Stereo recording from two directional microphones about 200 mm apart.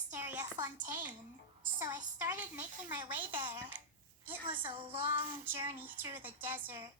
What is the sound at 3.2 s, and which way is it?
A woman's voice, 25° right (ahead or behind).